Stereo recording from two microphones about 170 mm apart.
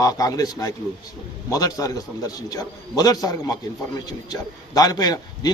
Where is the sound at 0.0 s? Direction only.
20° left (ahead or behind).